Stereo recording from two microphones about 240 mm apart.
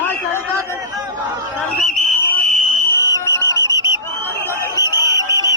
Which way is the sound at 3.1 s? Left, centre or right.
Centre.